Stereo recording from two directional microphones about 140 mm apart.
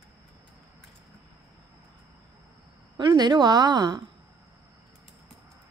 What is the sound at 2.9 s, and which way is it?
A woman's voice, 30° right (ahead or behind).